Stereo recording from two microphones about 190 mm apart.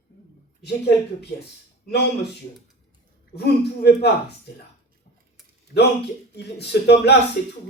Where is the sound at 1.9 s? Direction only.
60° left (ahead or behind).